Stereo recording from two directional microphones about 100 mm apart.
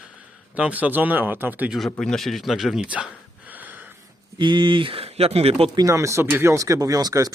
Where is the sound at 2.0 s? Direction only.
5° left (ahead or behind).